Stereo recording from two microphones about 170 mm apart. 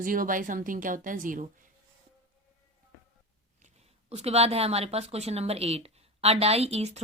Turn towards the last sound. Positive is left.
turn(degrees=-40)  # may be behind; listen again after turning